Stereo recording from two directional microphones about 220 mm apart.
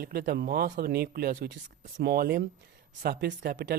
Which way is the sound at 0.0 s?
45° right (ahead or behind).